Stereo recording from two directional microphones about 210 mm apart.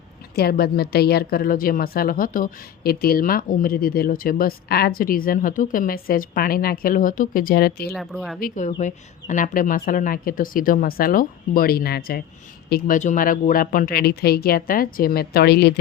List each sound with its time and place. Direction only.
0.3 s a woman's voice: 50° left (ahead or behind)
7.9 s speech: centre (ahead or behind)
8.4 s a woman's voice: 40° left (ahead or behind)